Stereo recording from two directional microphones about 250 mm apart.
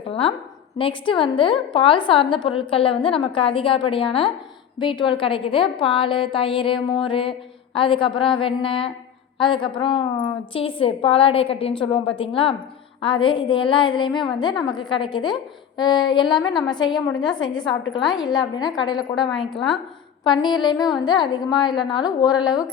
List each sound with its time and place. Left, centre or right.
0.1 s a woman's voice: left
19.5 s a woman's voice: centre
20.2 s a woman's voice: centre